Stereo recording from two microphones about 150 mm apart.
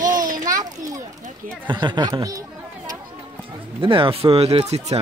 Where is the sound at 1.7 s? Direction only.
30° right (ahead or behind).